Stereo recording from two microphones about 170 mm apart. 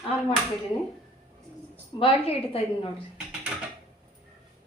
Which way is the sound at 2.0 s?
35° left (ahead or behind).